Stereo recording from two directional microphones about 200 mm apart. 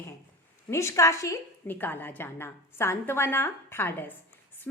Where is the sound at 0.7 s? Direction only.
15° left (ahead or behind).